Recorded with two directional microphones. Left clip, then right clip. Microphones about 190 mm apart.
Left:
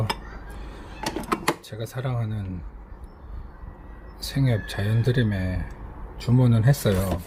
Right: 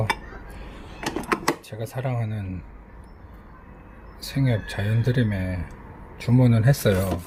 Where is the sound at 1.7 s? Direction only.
5° right (ahead or behind).